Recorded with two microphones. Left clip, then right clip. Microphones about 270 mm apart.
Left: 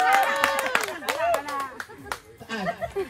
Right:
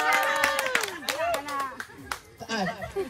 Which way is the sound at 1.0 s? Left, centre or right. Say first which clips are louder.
Left 3 dB; centre.